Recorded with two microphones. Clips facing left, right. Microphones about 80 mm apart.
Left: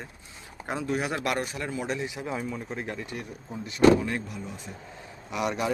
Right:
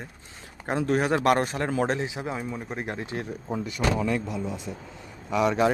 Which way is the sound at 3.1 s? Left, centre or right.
Right.